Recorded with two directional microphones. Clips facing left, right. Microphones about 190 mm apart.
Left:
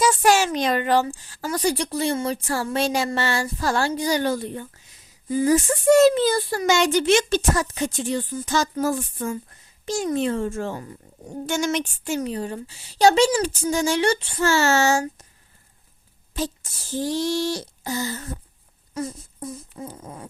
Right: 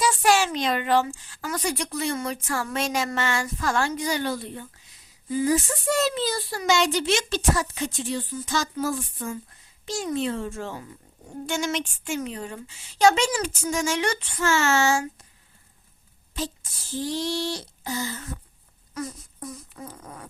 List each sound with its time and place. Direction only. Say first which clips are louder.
0.0 s a child's voice: left 3 dB; 45° left (ahead or behind)
16.9 s a child's voice: left 4 dB; 45° left (ahead or behind)
18.9 s dog: left 4 dB; 30° left (ahead or behind)